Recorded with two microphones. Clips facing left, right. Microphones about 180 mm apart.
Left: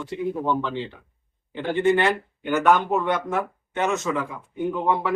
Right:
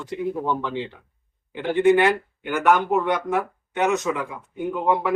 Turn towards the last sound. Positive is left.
turn(degrees=-10)  # may be behind; listen again after turning